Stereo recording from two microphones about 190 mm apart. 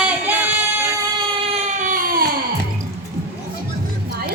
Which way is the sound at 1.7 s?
45° right (ahead or behind).